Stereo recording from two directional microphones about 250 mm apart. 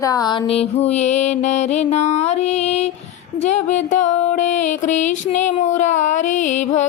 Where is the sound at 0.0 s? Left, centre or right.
Centre.